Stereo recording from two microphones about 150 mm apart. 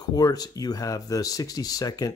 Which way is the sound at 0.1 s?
25° left (ahead or behind).